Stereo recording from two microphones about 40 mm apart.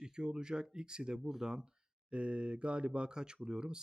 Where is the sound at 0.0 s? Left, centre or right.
Centre.